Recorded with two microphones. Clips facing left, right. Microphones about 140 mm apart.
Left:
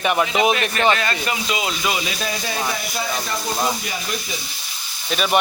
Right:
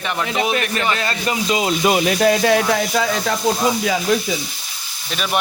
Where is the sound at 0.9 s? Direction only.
30° right (ahead or behind); by 3.3 s 90° right.